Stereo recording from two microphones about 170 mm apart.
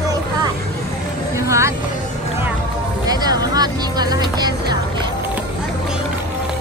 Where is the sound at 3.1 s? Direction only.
25° right (ahead or behind).